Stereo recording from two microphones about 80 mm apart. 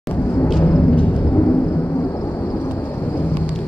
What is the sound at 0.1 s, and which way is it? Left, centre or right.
Vehicle, left.